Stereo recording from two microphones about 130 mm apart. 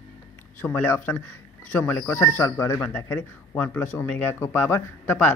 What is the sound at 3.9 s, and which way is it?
Speech, 15° left (ahead or behind).